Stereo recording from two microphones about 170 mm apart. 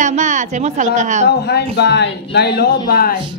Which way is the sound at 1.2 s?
75° left (ahead or behind).